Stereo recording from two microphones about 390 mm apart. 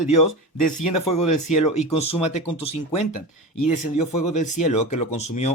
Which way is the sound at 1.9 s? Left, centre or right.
Centre.